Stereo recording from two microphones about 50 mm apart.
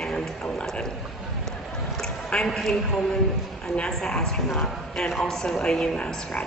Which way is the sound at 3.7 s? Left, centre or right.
Left.